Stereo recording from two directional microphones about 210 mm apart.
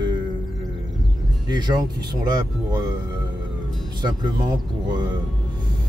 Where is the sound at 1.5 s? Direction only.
20° right (ahead or behind).